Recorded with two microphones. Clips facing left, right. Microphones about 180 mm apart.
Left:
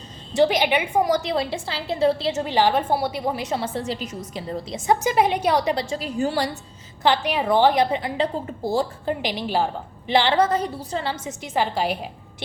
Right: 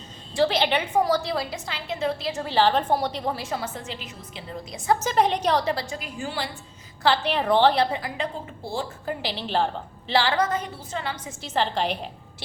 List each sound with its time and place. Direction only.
0.3 s a woman's voice: 15° left (ahead or behind); by 4.6 s 40° left (ahead or behind)
4.7 s a woman's voice: 20° left (ahead or behind)
5.1 s a woman's voice: 10° left (ahead or behind)
5.9 s a woman's voice: 35° left (ahead or behind)
7.0 s a woman's voice: 15° left (ahead or behind)
8.2 s a woman's voice: 40° left (ahead or behind)
9.0 s a woman's voice: 15° left (ahead or behind)
10.1 s a woman's voice: 20° left (ahead or behind)
11.4 s a woman's voice: 10° left (ahead or behind)